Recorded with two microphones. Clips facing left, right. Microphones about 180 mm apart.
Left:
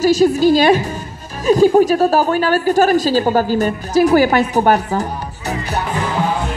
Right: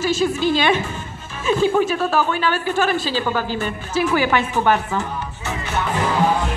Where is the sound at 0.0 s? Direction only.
40° left (ahead or behind).